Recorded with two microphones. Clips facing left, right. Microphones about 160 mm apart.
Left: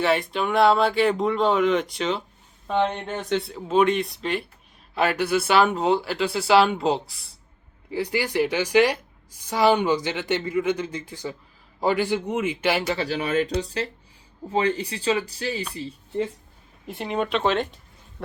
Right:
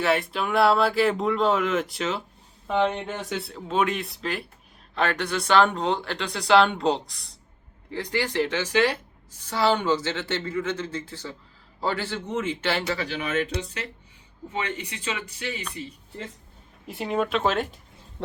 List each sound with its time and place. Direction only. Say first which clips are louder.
0.0 s a woman's voice: left 2 dB; centre (ahead or behind)
13.0 s speech: left 4 dB; 35° left (ahead or behind)
16.8 s speech: even; 5° right (ahead or behind)